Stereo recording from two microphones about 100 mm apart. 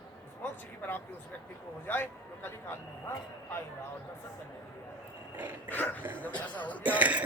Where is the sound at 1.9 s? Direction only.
20° left (ahead or behind).